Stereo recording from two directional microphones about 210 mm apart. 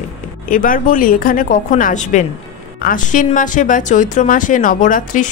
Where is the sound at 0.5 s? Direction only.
40° left (ahead or behind).